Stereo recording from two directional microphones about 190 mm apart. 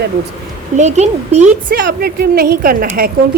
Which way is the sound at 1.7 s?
55° right (ahead or behind).